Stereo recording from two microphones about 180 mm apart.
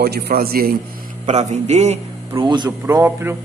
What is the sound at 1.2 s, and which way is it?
Speech, 40° right (ahead or behind).